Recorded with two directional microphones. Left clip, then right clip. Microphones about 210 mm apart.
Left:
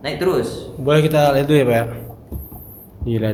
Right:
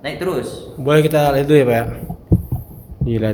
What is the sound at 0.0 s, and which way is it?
Speech, 10° right (ahead or behind).